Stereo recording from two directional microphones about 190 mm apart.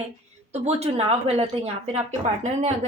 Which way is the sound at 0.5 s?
35° right (ahead or behind).